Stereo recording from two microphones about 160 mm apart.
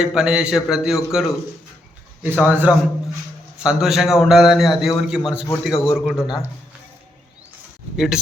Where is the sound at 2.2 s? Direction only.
10° right (ahead or behind).